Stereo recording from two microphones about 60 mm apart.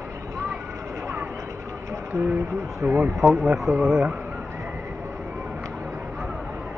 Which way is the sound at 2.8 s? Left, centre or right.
Right.